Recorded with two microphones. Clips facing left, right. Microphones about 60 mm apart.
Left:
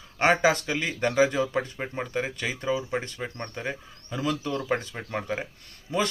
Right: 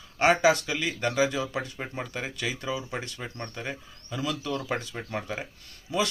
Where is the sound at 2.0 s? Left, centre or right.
Centre.